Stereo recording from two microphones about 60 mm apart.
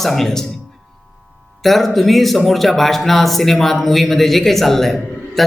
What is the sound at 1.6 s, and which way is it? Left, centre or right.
Speech, centre.